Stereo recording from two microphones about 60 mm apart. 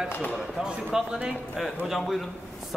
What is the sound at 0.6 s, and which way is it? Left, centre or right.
A man's voice, centre.